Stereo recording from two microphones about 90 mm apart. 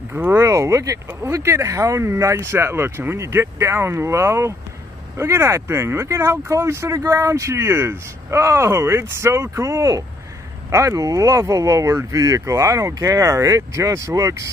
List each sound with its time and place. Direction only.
0.1 s speech: 25° right (ahead or behind)